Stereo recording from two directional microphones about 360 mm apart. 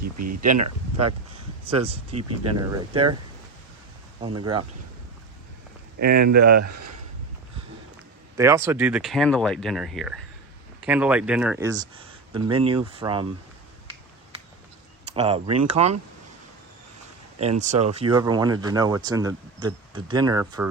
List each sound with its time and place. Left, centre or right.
0.2 s speech: right
1.6 s speech: centre
4.2 s speech: centre
6.0 s speech: right
8.4 s speech: centre
15.1 s speech: centre
17.6 s speech: centre